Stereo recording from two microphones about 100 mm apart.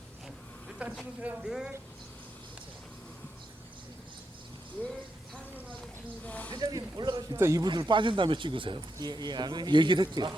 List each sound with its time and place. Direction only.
0.8 s speech: 10° right (ahead or behind)
6.2 s speech: 15° left (ahead or behind)
6.5 s speech: 40° right (ahead or behind)
7.3 s a man's voice: 25° right (ahead or behind)
7.6 s speech: 50° right (ahead or behind)